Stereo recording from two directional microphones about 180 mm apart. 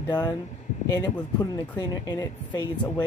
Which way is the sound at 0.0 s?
20° left (ahead or behind).